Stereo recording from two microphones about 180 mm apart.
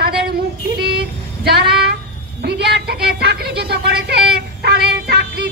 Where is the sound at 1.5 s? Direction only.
65° right (ahead or behind).